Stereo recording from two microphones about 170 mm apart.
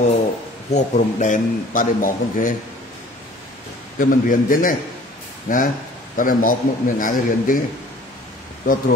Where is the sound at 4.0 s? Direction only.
55° left (ahead or behind).